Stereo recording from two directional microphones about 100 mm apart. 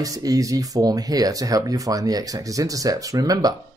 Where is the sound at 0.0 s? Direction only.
35° right (ahead or behind).